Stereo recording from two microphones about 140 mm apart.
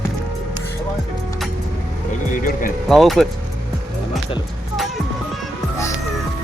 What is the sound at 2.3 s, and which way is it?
Speech, 80° left.